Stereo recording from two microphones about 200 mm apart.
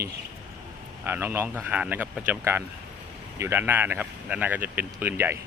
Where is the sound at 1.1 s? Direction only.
10° right (ahead or behind).